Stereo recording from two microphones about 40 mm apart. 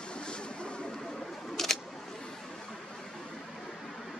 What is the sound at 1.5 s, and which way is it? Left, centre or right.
Camera, centre.